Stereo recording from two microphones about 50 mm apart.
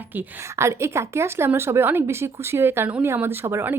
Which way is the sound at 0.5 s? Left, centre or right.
Right.